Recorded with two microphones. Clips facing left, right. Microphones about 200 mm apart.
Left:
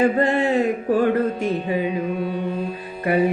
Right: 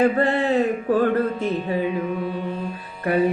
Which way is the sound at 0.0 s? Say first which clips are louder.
Left 1 dB; 15° left (ahead or behind).